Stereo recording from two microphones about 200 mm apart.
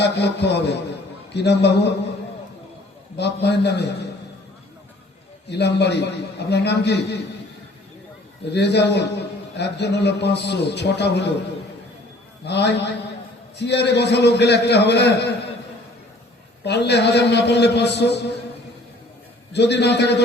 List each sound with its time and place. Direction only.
0.0 s a man's voice: 60° left (ahead or behind)
3.2 s a man's voice: 55° left (ahead or behind)
5.5 s a man's voice: 55° left (ahead or behind)
8.5 s a man's voice: 60° left (ahead or behind)
12.5 s a man's voice: 55° left (ahead or behind)
16.6 s a man's voice: 60° left (ahead or behind)
19.5 s a man's voice: 60° left (ahead or behind)